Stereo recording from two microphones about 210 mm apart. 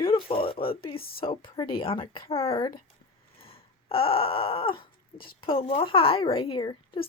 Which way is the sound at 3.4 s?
25° left (ahead or behind).